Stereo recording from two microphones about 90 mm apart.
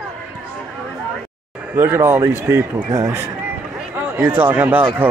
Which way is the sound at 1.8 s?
25° right (ahead or behind).